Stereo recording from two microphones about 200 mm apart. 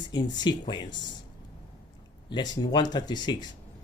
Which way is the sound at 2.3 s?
20° left (ahead or behind).